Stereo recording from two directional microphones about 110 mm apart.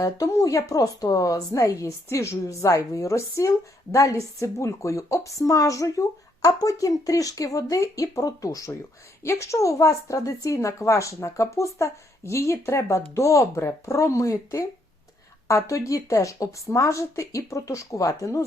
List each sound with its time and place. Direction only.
0.0 s a woman's voice: 30° left (ahead or behind)